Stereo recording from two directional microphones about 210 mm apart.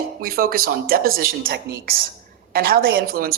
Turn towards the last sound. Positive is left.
turn(degrees=-45)  # may be behind; listen again after turning